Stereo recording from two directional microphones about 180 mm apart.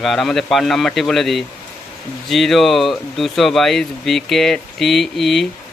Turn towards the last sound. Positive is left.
turn(degrees=0)  # may be behind; listen again after turning